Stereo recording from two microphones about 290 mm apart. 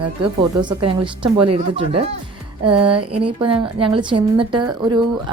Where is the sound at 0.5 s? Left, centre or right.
Centre.